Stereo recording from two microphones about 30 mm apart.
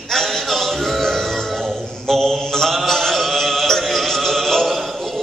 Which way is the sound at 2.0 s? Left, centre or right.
Centre.